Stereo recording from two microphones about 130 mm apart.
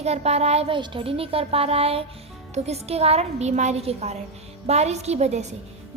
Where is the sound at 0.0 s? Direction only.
55° right (ahead or behind).